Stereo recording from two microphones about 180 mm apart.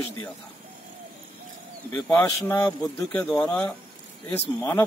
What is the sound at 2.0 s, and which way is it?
Speech, 15° left (ahead or behind).